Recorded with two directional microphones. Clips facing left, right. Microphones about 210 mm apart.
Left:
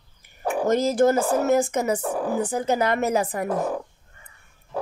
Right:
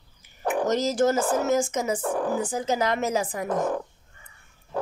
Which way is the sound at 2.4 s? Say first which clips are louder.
Left 3 dB; 60° left (ahead or behind).